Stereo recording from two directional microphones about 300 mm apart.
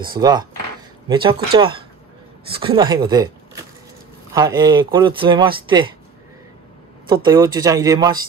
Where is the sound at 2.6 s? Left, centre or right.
Centre.